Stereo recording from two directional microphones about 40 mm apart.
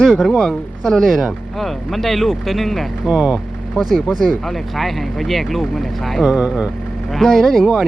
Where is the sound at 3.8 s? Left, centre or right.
Centre.